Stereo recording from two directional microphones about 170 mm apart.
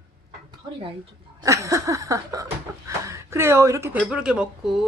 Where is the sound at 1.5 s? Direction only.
20° right (ahead or behind).